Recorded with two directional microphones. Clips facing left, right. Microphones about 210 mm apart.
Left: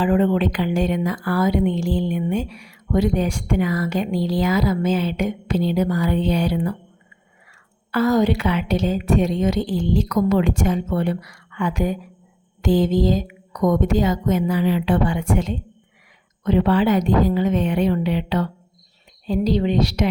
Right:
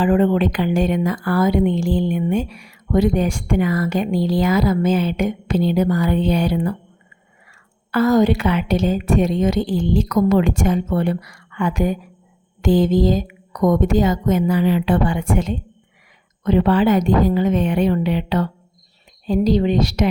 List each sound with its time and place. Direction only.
0.0 s speech: 50° right (ahead or behind)
7.9 s speech: 50° right (ahead or behind)